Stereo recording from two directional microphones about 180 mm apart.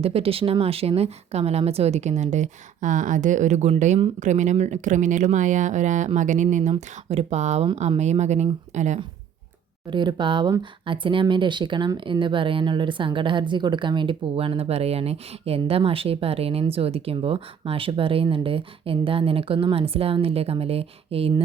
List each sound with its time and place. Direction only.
0.0 s speech: 30° right (ahead or behind)
9.9 s speech: 25° right (ahead or behind)